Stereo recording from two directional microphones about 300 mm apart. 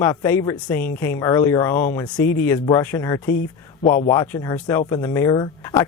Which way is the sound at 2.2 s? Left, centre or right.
Left.